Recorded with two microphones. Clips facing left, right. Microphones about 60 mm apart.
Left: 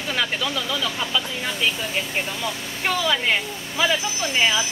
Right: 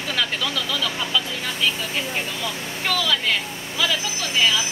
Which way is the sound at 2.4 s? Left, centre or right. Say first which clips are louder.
Left 1 dB; left.